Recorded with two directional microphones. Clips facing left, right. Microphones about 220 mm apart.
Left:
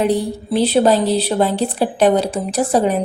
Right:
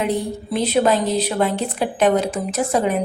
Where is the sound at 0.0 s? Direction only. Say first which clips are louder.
Left 4 dB; 35° left (ahead or behind).